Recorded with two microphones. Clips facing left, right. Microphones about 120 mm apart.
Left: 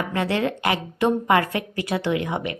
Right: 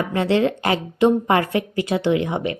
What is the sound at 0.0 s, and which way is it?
A woman's voice, 25° right (ahead or behind).